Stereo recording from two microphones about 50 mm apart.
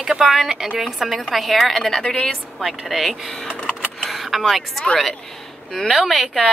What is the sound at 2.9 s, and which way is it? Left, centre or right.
A woman's voice, centre.